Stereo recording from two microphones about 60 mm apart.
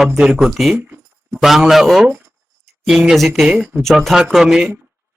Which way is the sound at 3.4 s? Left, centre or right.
Centre.